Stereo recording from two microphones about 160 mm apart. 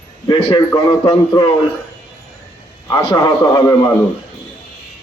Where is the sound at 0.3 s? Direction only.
25° left (ahead or behind).